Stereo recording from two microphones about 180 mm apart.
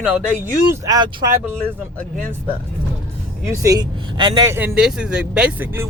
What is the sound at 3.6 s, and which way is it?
Speech, 20° right (ahead or behind).